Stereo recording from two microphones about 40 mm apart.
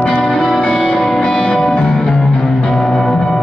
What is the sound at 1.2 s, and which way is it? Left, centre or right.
Music, left.